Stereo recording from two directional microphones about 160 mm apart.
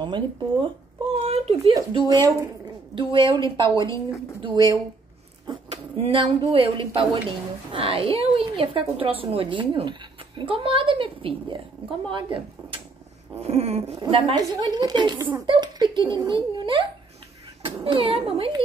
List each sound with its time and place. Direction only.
0.0 s a woman's voice: 30° right (ahead or behind)
1.2 s a sound: 40° right (ahead or behind)
1.7 s a woman's voice: 25° right (ahead or behind)
5.7 s a woman's voice: 40° right (ahead or behind)